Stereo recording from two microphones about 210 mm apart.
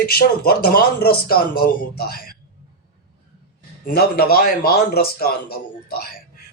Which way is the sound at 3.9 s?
45° left (ahead or behind).